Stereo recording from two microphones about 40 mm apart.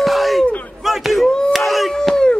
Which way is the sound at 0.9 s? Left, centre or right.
Centre.